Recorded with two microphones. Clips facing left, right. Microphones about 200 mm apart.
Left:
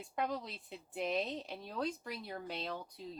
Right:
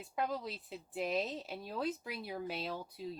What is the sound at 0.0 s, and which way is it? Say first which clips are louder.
Speech: right 1 dB; centre (ahead or behind).